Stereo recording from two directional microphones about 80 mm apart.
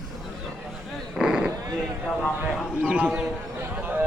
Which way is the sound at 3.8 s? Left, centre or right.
Right.